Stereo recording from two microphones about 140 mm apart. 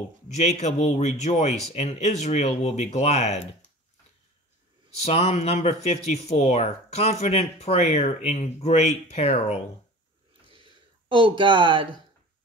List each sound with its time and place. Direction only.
0.3 s a man's voice: 55° left (ahead or behind)
5.0 s speech: 50° left (ahead or behind)
10.5 s a sound: 35° right (ahead or behind)